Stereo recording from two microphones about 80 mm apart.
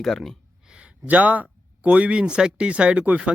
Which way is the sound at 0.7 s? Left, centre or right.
Centre.